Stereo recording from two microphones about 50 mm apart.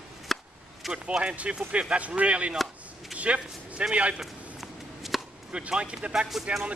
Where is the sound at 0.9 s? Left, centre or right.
Right.